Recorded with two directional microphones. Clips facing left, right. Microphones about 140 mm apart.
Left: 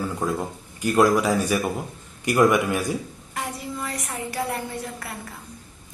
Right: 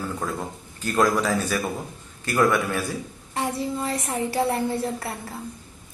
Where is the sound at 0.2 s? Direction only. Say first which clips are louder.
Left 4 dB; 10° left (ahead or behind).